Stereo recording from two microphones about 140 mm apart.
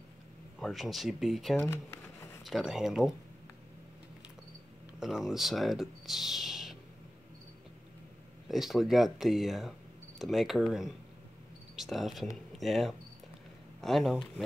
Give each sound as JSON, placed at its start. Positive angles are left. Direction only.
{"t": 0.6, "sound": "speech", "side_deg": 0}
{"t": 1.6, "sound": "a sound", "side_deg": 20}
{"t": 2.4, "sound": "speech", "side_deg": 0}
{"t": 5.0, "sound": "speech", "side_deg": 0}
{"t": 8.5, "sound": "speech", "side_deg": 0}